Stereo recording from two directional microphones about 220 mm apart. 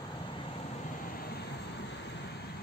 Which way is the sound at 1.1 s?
45° left (ahead or behind).